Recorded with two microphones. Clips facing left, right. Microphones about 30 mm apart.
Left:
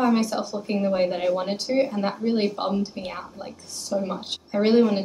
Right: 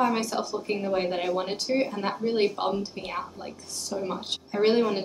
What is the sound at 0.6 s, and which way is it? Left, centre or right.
A woman's voice, centre.